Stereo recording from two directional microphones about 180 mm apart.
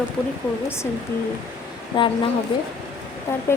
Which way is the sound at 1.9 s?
25° left (ahead or behind).